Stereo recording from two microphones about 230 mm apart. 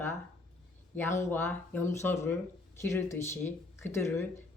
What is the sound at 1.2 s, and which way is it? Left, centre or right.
Speech, centre.